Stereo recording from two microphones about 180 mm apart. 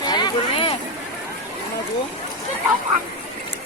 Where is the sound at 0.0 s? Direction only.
25° left (ahead or behind).